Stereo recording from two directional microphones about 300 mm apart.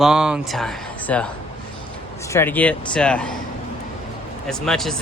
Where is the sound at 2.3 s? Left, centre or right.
Centre.